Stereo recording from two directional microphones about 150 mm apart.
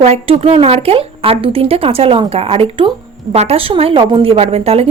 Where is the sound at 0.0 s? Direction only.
45° right (ahead or behind).